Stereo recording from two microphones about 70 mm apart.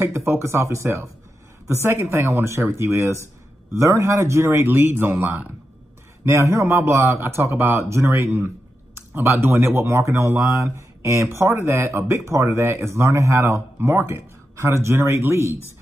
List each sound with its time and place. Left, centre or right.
0.0 s speech: right
6.2 s speech: right